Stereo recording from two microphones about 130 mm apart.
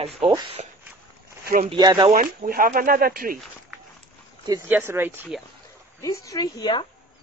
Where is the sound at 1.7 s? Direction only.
35° right (ahead or behind).